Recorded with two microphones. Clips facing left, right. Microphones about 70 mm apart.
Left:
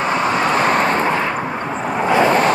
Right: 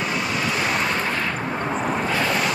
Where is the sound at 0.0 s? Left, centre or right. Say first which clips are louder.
Left 7 dB; left.